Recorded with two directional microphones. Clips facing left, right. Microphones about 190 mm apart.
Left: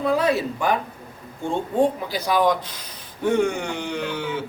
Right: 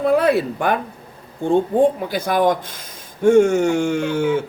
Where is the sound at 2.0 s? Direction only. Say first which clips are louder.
Right 3 dB; 50° right (ahead or behind).